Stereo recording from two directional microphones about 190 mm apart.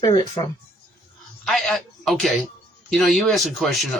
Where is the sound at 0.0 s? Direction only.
20° left (ahead or behind).